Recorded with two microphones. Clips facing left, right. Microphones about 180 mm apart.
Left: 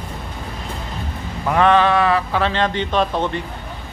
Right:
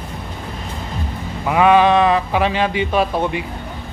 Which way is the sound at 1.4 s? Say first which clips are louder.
Right 2 dB; 10° right (ahead or behind).